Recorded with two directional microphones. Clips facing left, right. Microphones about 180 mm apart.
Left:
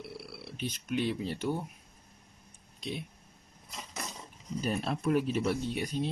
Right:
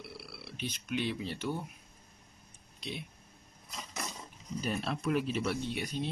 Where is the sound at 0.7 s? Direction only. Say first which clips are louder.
Left 3 dB; 40° left (ahead or behind).